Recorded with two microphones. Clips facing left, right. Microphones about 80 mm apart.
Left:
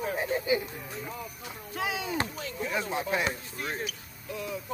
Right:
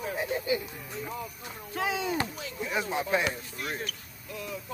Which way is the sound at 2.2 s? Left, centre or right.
Left.